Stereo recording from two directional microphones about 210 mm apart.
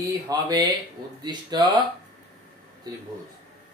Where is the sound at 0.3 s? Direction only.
20° right (ahead or behind).